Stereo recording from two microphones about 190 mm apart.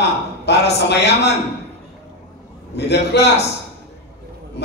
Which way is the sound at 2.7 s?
60° left (ahead or behind).